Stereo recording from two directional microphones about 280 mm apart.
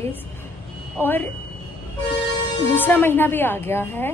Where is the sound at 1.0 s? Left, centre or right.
Centre.